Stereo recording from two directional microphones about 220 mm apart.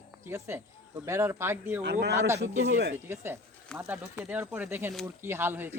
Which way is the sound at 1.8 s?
50° right (ahead or behind).